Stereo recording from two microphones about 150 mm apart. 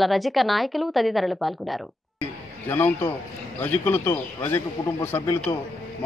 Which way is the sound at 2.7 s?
15° left (ahead or behind).